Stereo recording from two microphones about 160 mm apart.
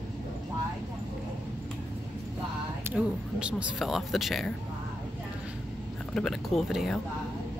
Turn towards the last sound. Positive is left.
turn(degrees=0)  # may be behind; listen again after turning